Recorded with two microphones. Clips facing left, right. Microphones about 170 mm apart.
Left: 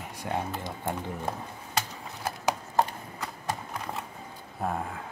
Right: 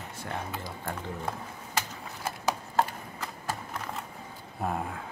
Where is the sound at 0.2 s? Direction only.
20° left (ahead or behind).